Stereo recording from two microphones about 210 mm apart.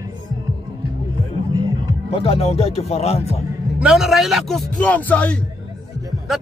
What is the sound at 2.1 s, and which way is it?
Speech, 30° left (ahead or behind).